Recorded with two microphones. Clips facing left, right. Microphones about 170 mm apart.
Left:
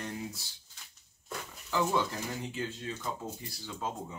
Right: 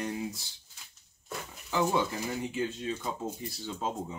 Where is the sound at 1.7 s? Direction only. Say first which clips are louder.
Right 2 dB; 15° right (ahead or behind).